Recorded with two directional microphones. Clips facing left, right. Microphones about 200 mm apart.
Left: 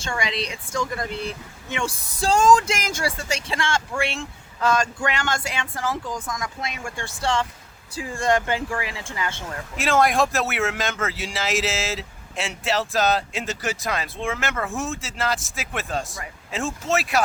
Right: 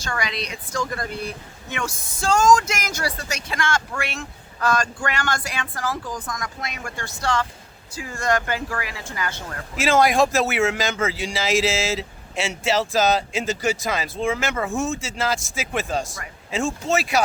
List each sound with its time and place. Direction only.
0.0 s speech: 25° left (ahead or behind)
9.7 s a man's voice: centre (ahead or behind)